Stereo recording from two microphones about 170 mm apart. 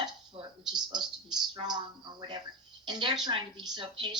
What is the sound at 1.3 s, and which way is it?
A woman's voice, 25° right (ahead or behind).